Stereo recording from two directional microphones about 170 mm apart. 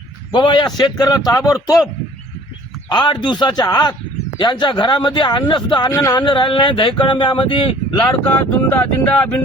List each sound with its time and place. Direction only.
0.3 s a man's voice: 25° left (ahead or behind)
2.9 s a man's voice: 25° left (ahead or behind)
8.0 s speech: 10° left (ahead or behind)